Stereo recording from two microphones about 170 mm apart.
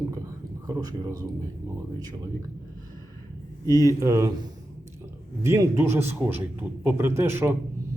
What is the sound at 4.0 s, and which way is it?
Speech, 15° right (ahead or behind).